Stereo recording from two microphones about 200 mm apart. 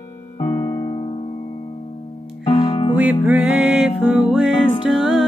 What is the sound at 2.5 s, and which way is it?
Music, 25° left (ahead or behind).